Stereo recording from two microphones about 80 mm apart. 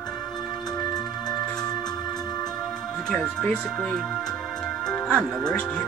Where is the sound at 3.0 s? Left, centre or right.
Centre.